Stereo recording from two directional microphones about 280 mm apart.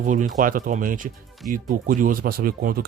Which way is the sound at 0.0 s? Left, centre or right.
Right.